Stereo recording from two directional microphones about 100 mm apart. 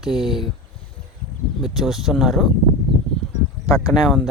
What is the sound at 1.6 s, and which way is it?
Speech, centre (ahead or behind).